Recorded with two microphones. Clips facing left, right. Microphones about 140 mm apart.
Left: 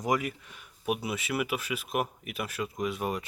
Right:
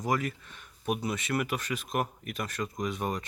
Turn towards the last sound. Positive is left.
turn(degrees=5)  # may be behind; listen again after turning